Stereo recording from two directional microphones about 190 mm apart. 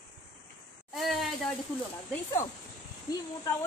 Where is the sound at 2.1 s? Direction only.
15° left (ahead or behind).